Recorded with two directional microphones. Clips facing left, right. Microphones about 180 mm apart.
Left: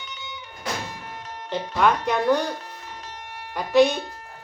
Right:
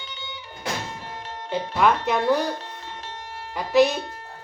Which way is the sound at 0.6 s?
30° right (ahead or behind).